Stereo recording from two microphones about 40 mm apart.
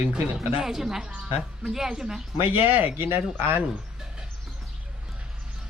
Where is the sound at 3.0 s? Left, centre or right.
Right.